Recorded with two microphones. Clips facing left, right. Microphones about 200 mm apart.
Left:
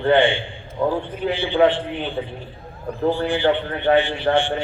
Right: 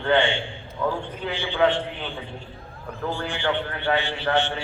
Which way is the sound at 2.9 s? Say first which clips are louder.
Left 9 dB; 35° left (ahead or behind).